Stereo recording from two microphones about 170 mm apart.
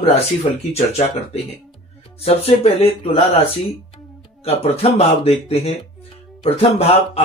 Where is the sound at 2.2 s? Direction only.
35° left (ahead or behind).